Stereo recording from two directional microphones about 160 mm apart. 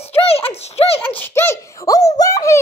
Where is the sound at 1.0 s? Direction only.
10° left (ahead or behind).